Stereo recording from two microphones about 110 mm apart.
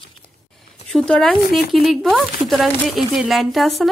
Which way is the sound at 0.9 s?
5° left (ahead or behind).